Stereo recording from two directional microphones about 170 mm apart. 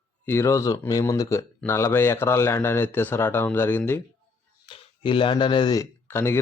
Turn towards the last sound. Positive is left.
turn(degrees=15)  # may be behind; listen again after turning